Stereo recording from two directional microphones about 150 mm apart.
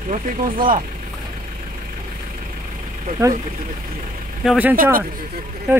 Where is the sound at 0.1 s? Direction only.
60° right (ahead or behind).